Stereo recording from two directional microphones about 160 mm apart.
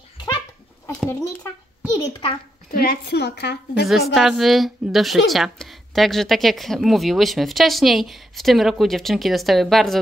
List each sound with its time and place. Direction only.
2.0 s a child's voice: 30° left (ahead or behind)
2.7 s a woman's voice: 75° left (ahead or behind); by 3.8 s 90° left
3.8 s a woman's voice: centre (ahead or behind)